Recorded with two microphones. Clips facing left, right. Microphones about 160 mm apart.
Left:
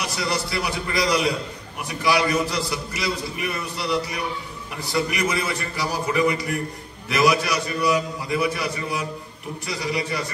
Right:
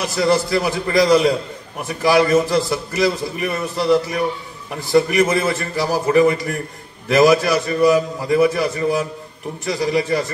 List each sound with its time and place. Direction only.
0.2 s a man's voice: 45° right (ahead or behind)
9.7 s a man's voice: 45° right (ahead or behind)